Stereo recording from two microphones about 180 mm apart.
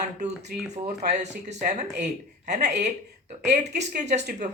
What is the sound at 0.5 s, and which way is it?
Speech, 60° right (ahead or behind).